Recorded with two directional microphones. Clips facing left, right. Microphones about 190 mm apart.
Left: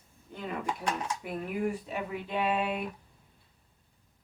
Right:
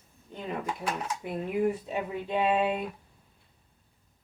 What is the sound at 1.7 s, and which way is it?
Speech, 20° right (ahead or behind).